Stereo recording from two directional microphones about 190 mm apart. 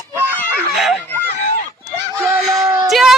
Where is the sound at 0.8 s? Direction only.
Centre (ahead or behind).